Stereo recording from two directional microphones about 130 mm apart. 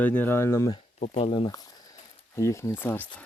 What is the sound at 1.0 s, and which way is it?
Speech, 50° left (ahead or behind).